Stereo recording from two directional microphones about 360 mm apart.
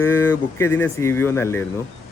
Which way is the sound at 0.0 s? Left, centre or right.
Centre.